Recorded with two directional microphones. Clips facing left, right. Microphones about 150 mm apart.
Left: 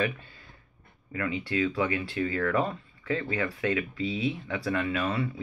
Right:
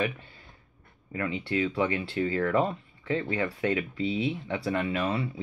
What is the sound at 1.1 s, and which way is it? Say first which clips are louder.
Speech: even; 25° right (ahead or behind).